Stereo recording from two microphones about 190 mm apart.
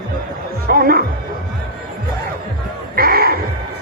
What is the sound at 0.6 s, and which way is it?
Speech, 50° right (ahead or behind).